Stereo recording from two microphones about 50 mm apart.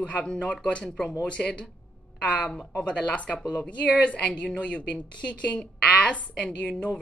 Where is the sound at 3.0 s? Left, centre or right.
Left.